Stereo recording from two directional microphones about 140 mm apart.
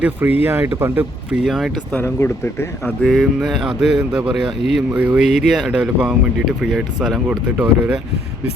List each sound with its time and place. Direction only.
0.0 s speech: 15° right (ahead or behind); by 2.0 s 5° left (ahead or behind)
2.1 s speech: 20° left (ahead or behind)
3.0 s speech: centre (ahead or behind)
5.2 s speech: 55° left (ahead or behind)
5.5 s speech: 5° right (ahead or behind)